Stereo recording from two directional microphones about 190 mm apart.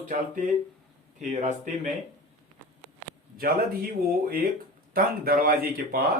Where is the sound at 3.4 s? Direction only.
50° right (ahead or behind).